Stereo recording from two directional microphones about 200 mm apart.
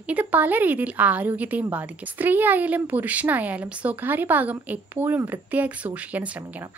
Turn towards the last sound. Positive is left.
turn(degrees=-10)  # may be behind; listen again after turning